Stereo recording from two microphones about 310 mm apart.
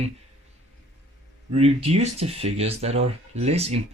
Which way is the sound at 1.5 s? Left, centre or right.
Centre.